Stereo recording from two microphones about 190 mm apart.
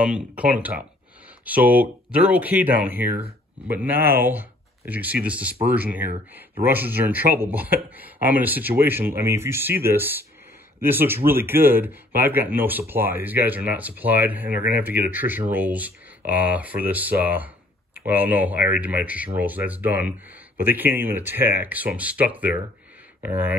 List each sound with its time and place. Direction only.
0.0 s speech: 5° right (ahead or behind)